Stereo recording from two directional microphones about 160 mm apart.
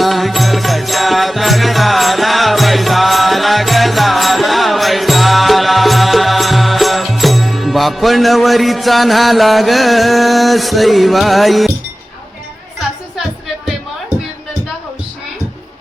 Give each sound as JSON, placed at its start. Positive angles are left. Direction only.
{"t": 0.0, "sound": "music", "side_deg": 0}